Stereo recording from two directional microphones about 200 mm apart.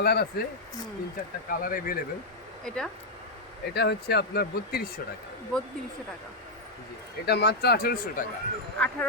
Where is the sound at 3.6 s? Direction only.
55° left (ahead or behind).